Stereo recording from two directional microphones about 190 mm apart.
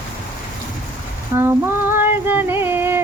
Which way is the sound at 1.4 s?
10° right (ahead or behind).